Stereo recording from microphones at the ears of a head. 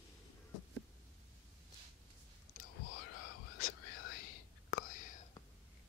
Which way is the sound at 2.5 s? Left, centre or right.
Left.